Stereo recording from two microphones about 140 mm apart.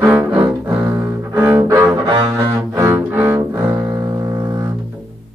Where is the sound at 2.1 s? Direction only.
35° right (ahead or behind).